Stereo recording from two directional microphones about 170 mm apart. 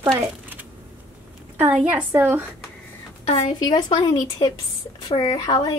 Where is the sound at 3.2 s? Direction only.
40° left (ahead or behind).